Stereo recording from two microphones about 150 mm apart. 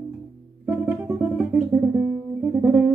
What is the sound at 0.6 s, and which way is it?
Music, 15° right (ahead or behind).